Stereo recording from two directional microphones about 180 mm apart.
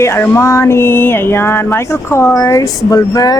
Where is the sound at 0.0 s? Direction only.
15° left (ahead or behind).